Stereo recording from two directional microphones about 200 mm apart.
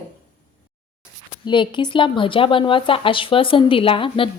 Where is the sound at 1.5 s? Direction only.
25° left (ahead or behind).